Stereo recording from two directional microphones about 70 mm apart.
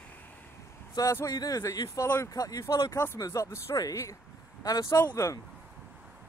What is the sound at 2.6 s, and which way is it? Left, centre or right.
Speech, left.